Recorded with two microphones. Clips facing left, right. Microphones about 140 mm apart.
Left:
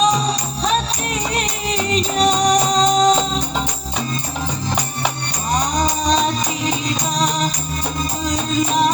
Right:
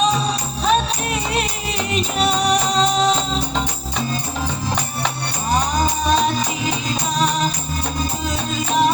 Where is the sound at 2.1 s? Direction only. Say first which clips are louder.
Left 3 dB; 40° left (ahead or behind).